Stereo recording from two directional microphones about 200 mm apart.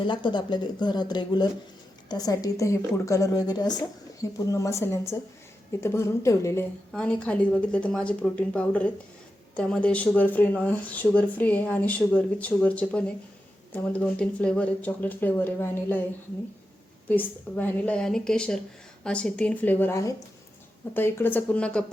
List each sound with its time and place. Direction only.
0.0 s a woman's voice: 25° left (ahead or behind)
17.1 s a woman's voice: 10° left (ahead or behind)